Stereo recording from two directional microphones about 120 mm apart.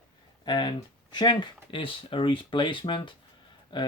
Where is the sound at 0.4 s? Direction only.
35° left (ahead or behind).